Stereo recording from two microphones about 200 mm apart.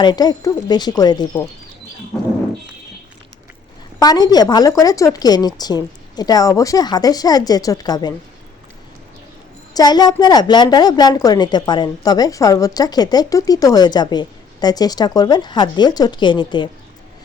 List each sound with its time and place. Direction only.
0.0 s a woman's voice: 20° left (ahead or behind)
4.0 s a woman's voice: 20° left (ahead or behind)
9.7 s a woman's voice: 20° left (ahead or behind)